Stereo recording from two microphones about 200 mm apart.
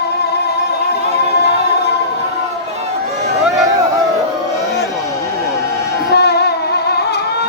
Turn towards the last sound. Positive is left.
turn(degrees=55)  # may be behind; listen again after turning